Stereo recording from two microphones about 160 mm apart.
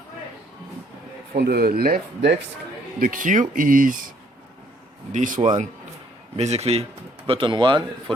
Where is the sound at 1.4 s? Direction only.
75° right (ahead or behind).